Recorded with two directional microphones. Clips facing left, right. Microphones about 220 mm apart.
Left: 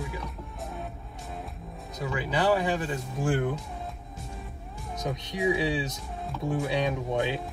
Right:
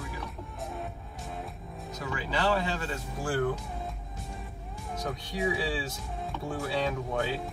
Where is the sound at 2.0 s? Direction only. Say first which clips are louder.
Left 4 dB; 20° left (ahead or behind).